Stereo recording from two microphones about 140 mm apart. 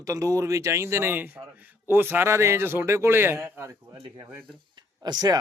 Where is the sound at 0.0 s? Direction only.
25° right (ahead or behind).